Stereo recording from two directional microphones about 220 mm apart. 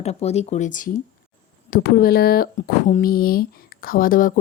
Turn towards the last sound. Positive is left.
turn(degrees=40)  # may be behind; listen again after turning